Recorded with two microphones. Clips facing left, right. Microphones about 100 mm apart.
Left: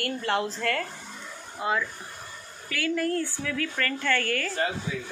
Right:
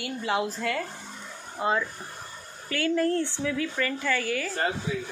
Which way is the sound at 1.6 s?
30° right (ahead or behind).